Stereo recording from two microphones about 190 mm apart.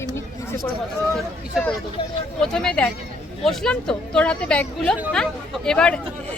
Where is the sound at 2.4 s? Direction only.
5° left (ahead or behind).